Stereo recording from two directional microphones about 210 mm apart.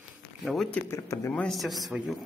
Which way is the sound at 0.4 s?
Centre (ahead or behind).